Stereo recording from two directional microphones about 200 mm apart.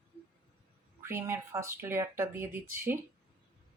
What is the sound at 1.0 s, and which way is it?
Speech, 15° right (ahead or behind).